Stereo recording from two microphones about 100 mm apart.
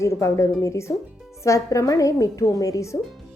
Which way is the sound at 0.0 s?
30° left (ahead or behind).